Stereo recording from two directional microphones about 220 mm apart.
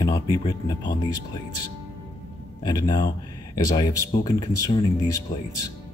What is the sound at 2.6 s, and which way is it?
Speech, 20° left (ahead or behind).